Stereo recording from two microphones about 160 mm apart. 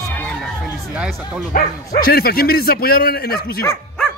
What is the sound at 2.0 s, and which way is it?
Speech, 70° left (ahead or behind).